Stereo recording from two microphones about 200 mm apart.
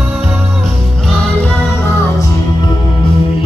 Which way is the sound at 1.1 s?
5° left (ahead or behind).